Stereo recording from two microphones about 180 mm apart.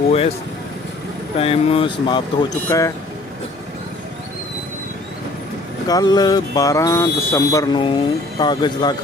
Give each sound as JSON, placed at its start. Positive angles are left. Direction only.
{"t": 1.4, "sound": "speech", "side_deg": 35}
{"t": 5.9, "sound": "speech", "side_deg": 20}